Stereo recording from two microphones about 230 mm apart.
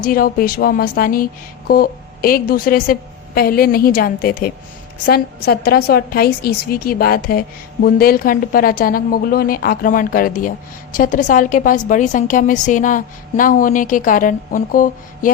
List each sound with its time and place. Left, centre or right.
0.0 s a woman's voice: left